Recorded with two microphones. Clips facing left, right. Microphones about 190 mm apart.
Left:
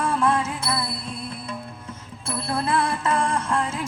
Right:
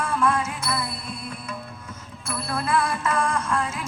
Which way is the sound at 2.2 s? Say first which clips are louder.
Left 2 dB; 30° left (ahead or behind).